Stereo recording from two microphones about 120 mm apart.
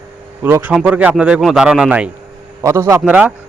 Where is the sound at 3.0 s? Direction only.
10° right (ahead or behind).